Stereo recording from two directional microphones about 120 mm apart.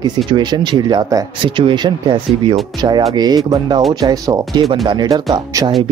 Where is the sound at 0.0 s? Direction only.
35° right (ahead or behind).